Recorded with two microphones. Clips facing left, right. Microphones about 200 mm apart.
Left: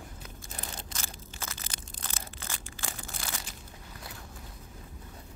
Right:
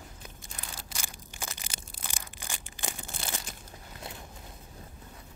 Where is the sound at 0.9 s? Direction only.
15° right (ahead or behind).